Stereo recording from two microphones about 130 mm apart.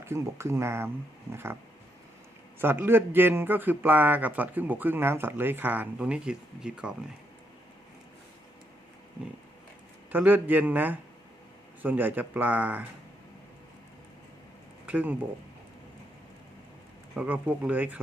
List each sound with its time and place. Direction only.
0.0 s speech: 20° right (ahead or behind)
2.6 s speech: 15° right (ahead or behind)
10.1 s speech: 15° right (ahead or behind)
14.8 s speech: 10° right (ahead or behind)
17.2 s speech: 10° right (ahead or behind)